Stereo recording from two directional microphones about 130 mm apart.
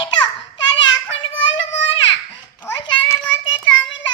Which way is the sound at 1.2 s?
40° left (ahead or behind).